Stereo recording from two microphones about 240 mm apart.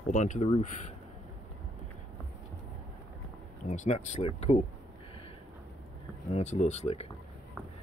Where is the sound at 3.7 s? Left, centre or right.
Left.